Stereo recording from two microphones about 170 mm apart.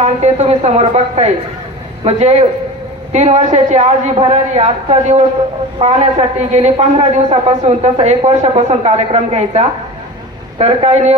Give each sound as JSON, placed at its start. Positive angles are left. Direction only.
{"t": 0.0, "sound": "a woman's voice", "side_deg": -40}